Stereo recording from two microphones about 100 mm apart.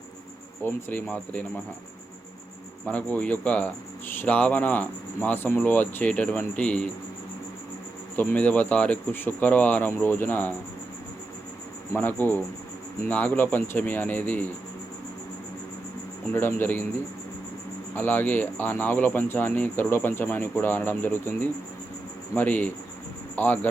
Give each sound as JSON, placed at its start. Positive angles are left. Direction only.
{"t": 0.6, "sound": "speech", "side_deg": 20}
{"t": 2.8, "sound": "speech", "side_deg": 15}
{"t": 8.1, "sound": "speech", "side_deg": 20}
{"t": 11.9, "sound": "speech", "side_deg": 20}
{"t": 16.3, "sound": "speech", "side_deg": 20}
{"t": 17.9, "sound": "speech", "side_deg": 20}